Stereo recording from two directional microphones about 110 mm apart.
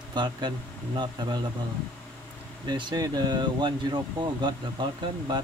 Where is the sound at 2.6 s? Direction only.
40° right (ahead or behind).